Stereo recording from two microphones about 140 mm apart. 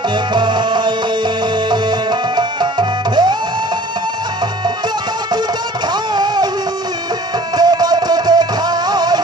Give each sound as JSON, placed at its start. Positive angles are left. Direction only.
{"t": 0.3, "sound": "music", "side_deg": -35}
{"t": 5.9, "sound": "music", "side_deg": -30}
{"t": 7.5, "sound": "music", "side_deg": -30}